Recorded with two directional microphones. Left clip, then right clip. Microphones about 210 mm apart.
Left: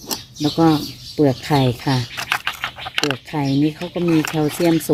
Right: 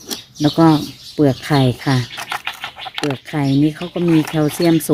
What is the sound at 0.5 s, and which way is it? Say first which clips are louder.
Speech: right 3 dB; 25° right (ahead or behind).